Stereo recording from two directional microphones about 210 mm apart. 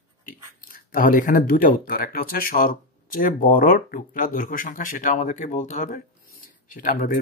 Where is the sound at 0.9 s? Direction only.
40° left (ahead or behind).